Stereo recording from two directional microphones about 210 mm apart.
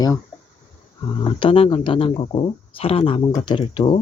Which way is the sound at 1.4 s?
25° left (ahead or behind).